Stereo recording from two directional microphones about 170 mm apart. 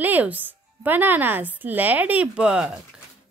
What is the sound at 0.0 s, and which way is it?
A woman's voice, 10° right (ahead or behind).